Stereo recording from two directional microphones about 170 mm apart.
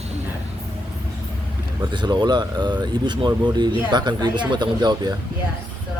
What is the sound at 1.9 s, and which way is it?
Speech, 25° right (ahead or behind).